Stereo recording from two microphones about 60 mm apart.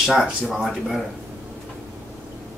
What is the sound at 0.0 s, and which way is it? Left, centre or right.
Speech, centre.